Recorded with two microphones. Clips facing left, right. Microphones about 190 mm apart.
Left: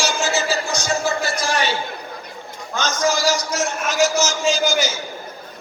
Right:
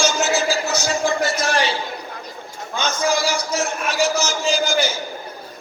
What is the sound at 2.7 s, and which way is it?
A man's voice, 60° right (ahead or behind).